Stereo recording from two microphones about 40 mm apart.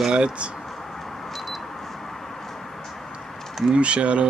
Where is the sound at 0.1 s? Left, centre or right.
Right.